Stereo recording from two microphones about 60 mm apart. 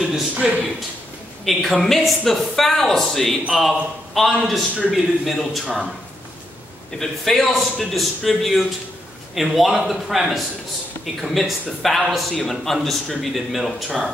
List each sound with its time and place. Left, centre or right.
0.3 s a man's voice: right
1.4 s a man's voice: centre
7.0 s a man's voice: centre